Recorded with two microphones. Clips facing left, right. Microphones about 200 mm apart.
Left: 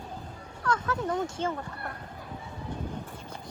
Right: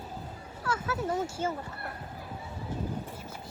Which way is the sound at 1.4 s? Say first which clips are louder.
Left 1 dB; 5° right (ahead or behind).